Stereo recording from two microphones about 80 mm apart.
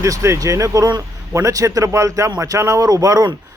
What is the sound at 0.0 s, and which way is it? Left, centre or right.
A man's voice, right.